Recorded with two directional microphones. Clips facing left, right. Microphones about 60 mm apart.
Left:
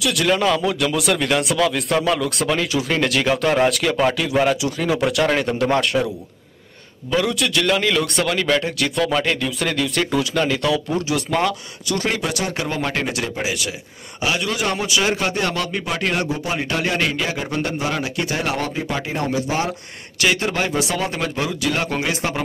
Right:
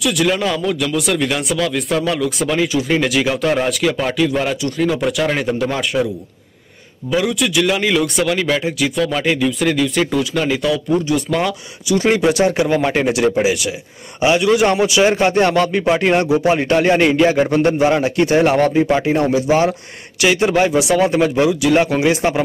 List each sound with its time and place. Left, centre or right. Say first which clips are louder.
0.0 s speech: right 1 dB; centre
7.1 s speech: right 3 dB; centre
12.0 s a man's voice: right 10 dB; right